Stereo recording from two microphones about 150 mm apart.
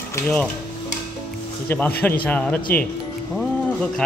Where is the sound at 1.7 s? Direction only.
15° left (ahead or behind).